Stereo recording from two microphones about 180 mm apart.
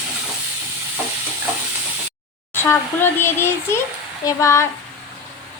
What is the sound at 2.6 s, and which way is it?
A child's voice, 10° left (ahead or behind).